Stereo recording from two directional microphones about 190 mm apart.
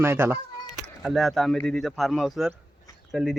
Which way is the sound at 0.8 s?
Centre (ahead or behind).